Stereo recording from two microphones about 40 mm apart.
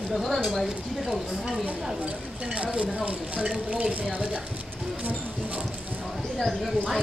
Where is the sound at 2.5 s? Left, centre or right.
Right.